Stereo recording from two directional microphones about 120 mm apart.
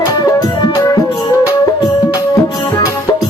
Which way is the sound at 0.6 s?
30° left (ahead or behind).